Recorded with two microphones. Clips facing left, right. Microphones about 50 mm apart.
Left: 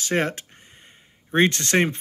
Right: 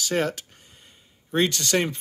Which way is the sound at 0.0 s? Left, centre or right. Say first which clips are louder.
Left 1 dB; left.